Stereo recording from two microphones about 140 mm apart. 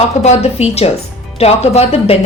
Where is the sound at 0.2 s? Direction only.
50° left (ahead or behind).